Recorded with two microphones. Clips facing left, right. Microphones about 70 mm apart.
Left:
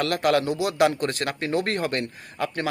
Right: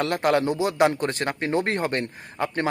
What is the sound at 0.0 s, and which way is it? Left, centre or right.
Speech, right.